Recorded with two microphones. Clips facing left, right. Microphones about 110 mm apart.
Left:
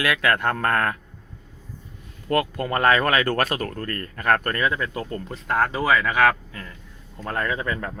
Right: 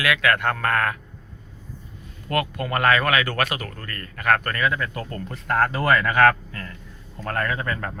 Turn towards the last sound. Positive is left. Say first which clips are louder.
# even
turn(degrees=15)  # may be behind; listen again after turning